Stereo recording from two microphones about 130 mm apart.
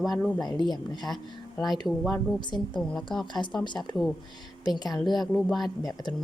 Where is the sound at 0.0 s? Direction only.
Centre (ahead or behind).